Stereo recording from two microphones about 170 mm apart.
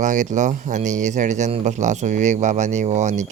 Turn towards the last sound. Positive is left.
turn(degrees=-45)  # may be behind; listen again after turning